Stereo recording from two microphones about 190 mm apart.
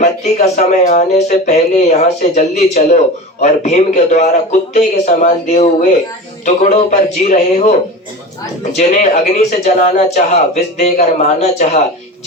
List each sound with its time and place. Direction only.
0.0 s speech: 40° left (ahead or behind)
8.8 s speech: 40° left (ahead or behind)